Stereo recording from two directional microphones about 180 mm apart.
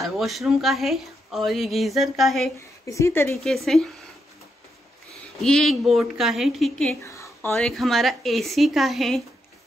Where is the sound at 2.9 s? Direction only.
15° left (ahead or behind).